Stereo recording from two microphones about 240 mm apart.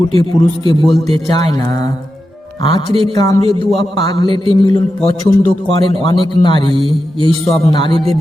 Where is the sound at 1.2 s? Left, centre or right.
Centre.